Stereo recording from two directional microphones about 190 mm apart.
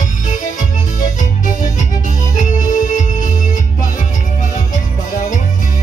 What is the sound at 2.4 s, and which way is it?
Music, 40° left (ahead or behind).